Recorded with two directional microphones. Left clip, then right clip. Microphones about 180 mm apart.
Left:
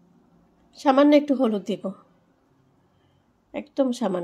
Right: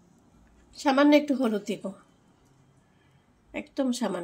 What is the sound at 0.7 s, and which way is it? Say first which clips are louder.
A woman's voice: left 4 dB; 40° left (ahead or behind).